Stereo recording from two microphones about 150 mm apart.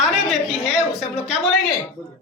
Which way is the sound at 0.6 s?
5° right (ahead or behind).